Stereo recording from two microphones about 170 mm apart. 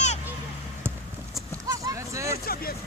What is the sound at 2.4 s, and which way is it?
Vehicle, 60° left (ahead or behind).